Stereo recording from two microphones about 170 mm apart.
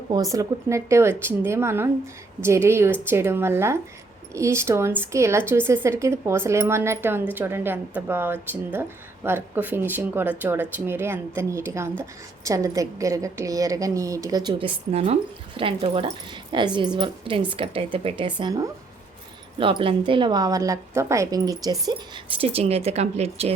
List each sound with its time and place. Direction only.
0.1 s a woman's voice: 20° right (ahead or behind)
14.9 s a woman's voice: 35° right (ahead or behind); by 22.2 s 20° right (ahead or behind)
22.4 s speech: 35° right (ahead or behind)